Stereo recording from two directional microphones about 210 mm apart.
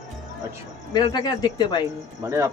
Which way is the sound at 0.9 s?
20° left (ahead or behind).